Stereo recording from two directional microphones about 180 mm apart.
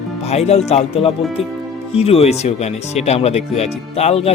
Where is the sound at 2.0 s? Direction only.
35° left (ahead or behind).